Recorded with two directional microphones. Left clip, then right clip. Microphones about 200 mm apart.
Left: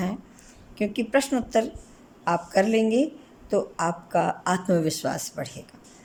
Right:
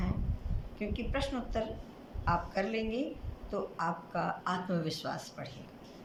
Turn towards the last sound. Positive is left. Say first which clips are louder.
# left 10 dB
turn(degrees=45)  # may be behind; listen again after turning